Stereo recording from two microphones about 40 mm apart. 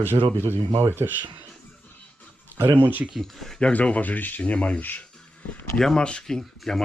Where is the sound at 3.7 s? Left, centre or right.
Left.